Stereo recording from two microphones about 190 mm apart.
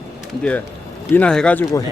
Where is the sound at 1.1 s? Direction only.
5° left (ahead or behind).